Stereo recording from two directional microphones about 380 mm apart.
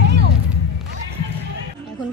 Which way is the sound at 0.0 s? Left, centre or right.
Right.